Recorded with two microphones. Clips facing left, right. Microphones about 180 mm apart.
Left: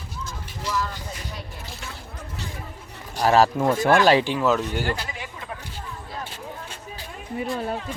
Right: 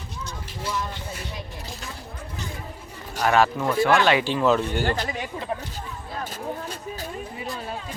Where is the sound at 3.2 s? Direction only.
35° left (ahead or behind).